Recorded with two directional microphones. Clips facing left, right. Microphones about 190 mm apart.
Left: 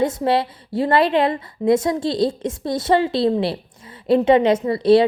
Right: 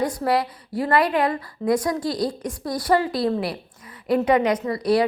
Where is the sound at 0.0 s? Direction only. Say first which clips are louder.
Left 3 dB; 25° left (ahead or behind).